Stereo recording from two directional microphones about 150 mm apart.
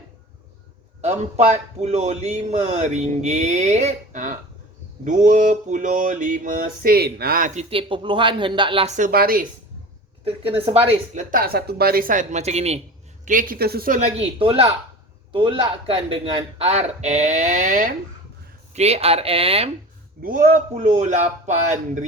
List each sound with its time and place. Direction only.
1.0 s speech: 50° right (ahead or behind)
5.0 s mantra: 60° right (ahead or behind); by 9.0 s 40° right (ahead or behind)
9.0 s a woman's voice: 70° right (ahead or behind)
11.1 s mantra: 60° right (ahead or behind)
13.2 s mantra: 60° right (ahead or behind)
14.3 s speech: 40° right (ahead or behind); by 17.9 s 55° right (ahead or behind)
18.7 s speech: 45° right (ahead or behind)
20.2 s a woman's voice: 65° right (ahead or behind)
20.7 s speech: 50° right (ahead or behind)